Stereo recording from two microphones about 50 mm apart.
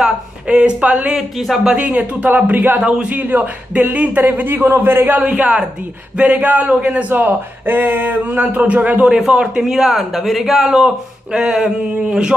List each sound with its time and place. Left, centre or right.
0.0 s speech: right
1.1 s a man's voice: centre
1.8 s a man's voice: right
2.8 s speech: centre
3.1 s a man's voice: right
5.1 s a man's voice: right
7.1 s a man's voice: right
9.0 s speech: centre